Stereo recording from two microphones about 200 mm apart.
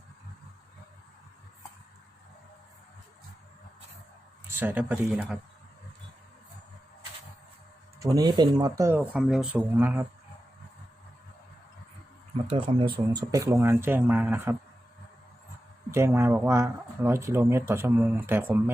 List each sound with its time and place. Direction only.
4.4 s speech: 10° right (ahead or behind)
7.9 s speech: 15° right (ahead or behind)
12.5 s speech: 25° right (ahead or behind); by 14.5 s 10° right (ahead or behind)
15.9 s speech: 15° right (ahead or behind)